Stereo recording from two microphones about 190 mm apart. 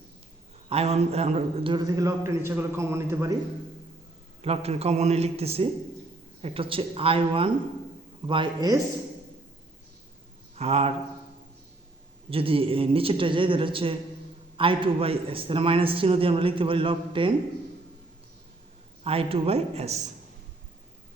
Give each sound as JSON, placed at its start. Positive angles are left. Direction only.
{"t": 0.7, "sound": "a man's voice", "side_deg": -35}
{"t": 4.4, "sound": "a man's voice", "side_deg": -30}
{"t": 10.5, "sound": "speech", "side_deg": -35}
{"t": 12.3, "sound": "a man's voice", "side_deg": -30}
{"t": 19.0, "sound": "a man's voice", "side_deg": -30}